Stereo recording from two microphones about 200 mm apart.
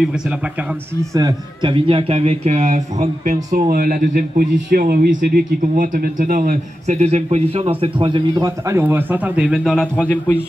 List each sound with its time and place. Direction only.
1.1 s a man's voice: 20° right (ahead or behind); by 10.4 s 10° left (ahead or behind)